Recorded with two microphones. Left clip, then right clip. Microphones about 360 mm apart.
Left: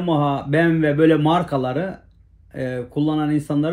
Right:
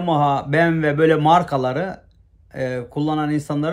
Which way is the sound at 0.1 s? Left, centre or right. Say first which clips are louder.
Right 2 dB; centre.